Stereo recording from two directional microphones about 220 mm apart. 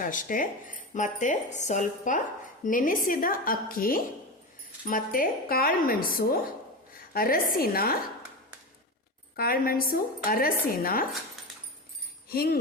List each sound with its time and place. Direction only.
0.0 s speech: 35° left (ahead or behind)
9.3 s speech: 40° left (ahead or behind)
12.3 s speech: 45° left (ahead or behind)